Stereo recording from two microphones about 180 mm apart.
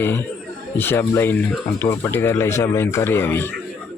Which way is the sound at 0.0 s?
10° left (ahead or behind).